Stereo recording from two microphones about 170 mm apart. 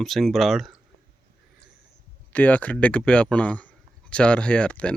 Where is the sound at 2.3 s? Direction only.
10° left (ahead or behind).